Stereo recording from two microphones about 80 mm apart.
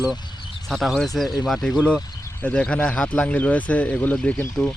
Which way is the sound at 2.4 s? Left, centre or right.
Centre.